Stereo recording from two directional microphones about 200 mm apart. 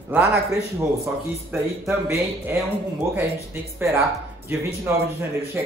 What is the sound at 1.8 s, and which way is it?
Speech, 10° right (ahead or behind).